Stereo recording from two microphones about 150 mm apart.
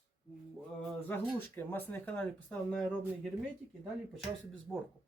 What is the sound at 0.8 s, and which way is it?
Speech, 10° left (ahead or behind).